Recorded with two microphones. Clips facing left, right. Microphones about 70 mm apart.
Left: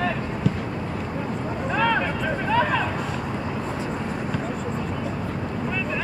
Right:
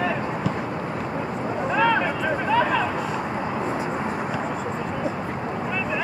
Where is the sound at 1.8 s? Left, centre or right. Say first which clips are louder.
Right 2 dB; centre.